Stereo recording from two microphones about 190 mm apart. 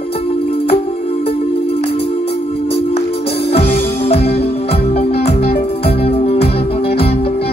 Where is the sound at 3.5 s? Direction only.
30° left (ahead or behind).